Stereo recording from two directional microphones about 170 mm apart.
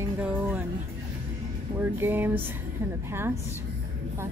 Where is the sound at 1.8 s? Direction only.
10° right (ahead or behind).